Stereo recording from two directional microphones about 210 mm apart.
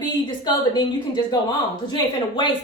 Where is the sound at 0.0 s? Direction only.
20° left (ahead or behind).